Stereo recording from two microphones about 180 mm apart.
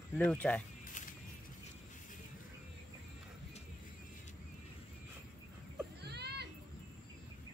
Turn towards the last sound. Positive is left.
turn(degrees=-65)  # may be behind; listen again after turning